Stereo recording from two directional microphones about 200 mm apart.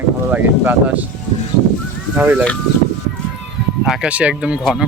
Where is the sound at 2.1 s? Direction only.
10° right (ahead or behind).